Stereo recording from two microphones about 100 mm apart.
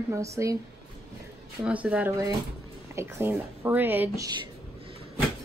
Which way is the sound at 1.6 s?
15° right (ahead or behind).